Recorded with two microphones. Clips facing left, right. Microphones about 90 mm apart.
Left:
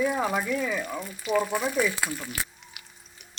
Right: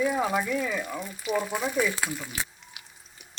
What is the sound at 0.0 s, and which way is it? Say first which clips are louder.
Speech: even; centre (ahead or behind).